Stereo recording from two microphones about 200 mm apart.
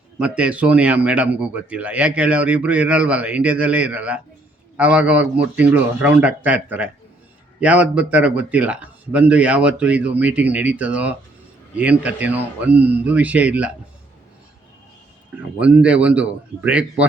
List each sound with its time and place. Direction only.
0.2 s a man's voice: 5° right (ahead or behind)
15.5 s a man's voice: 5° right (ahead or behind)